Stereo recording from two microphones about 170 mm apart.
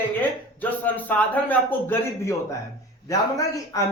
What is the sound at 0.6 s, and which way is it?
A man's voice, 10° left (ahead or behind).